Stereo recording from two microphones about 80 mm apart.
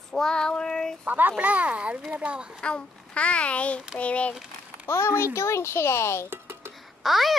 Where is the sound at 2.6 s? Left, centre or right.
Centre.